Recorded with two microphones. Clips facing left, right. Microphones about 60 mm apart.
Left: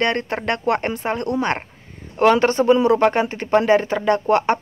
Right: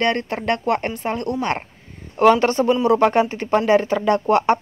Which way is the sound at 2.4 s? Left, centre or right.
Centre.